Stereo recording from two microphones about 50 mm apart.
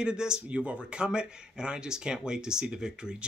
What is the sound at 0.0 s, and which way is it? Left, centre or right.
Speech, centre.